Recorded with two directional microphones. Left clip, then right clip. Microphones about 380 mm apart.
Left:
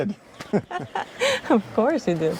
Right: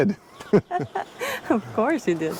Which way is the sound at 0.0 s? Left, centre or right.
Right.